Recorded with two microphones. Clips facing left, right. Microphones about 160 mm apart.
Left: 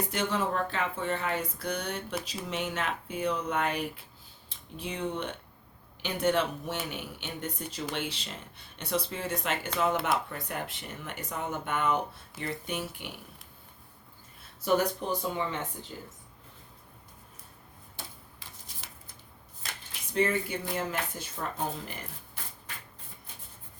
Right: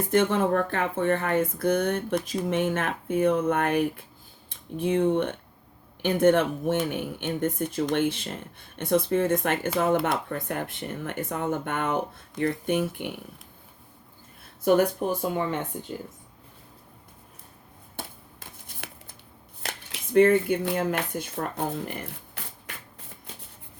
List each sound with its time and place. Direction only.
0.1 s speech: 50° right (ahead or behind)
14.6 s speech: 55° right (ahead or behind)
17.9 s shuffling cards: 55° right (ahead or behind)
19.6 s speech: 60° right (ahead or behind)